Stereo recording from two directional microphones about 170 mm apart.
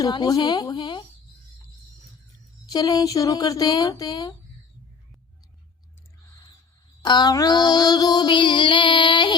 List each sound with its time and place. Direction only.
0.0 s child singing: 25° left (ahead or behind)
2.6 s child singing: 25° left (ahead or behind)
7.0 s child singing: 25° left (ahead or behind)